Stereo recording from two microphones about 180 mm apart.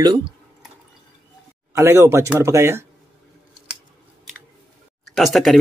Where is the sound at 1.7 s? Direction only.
15° right (ahead or behind).